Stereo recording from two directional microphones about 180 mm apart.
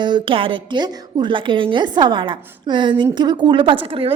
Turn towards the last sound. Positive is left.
turn(degrees=-30)  # may be behind; listen again after turning